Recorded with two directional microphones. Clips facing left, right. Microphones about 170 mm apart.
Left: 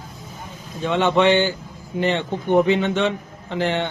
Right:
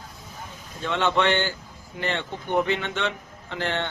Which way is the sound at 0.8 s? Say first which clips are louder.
Left 6 dB; 15° left (ahead or behind).